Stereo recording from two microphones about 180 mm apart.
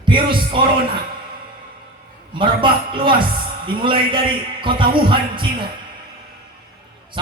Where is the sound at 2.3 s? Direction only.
25° right (ahead or behind).